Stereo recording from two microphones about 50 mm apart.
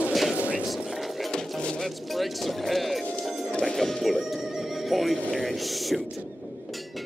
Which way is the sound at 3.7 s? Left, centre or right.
Centre.